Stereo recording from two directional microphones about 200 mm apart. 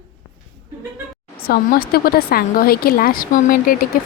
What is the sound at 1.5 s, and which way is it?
A woman's voice, 50° left (ahead or behind).